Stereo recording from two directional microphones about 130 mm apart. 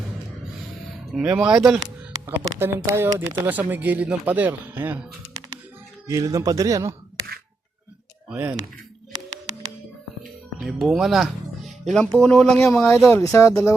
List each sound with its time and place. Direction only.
1.1 s speech: 5° right (ahead or behind)
2.2 s speech: 15° right (ahead or behind)
6.1 s speech: 25° right (ahead or behind)
8.3 s speech: 10° right (ahead or behind)
10.6 s speech: centre (ahead or behind)
12.9 s speech: 20° left (ahead or behind)